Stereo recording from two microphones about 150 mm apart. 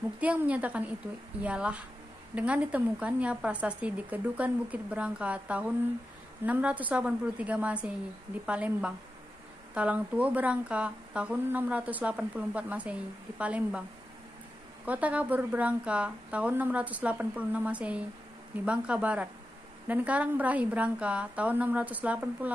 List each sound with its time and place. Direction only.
0.2 s speech: 10° right (ahead or behind)
14.9 s speech: 10° right (ahead or behind)